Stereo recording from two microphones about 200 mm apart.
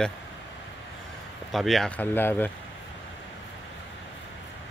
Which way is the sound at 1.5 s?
Centre (ahead or behind).